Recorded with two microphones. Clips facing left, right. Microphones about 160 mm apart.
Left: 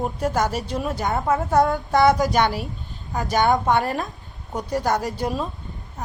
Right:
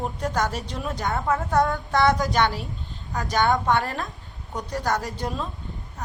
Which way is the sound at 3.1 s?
20° left (ahead or behind).